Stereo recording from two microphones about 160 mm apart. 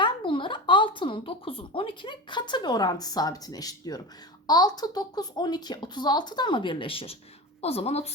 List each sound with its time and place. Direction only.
0.0 s a woman's voice: 30° left (ahead or behind)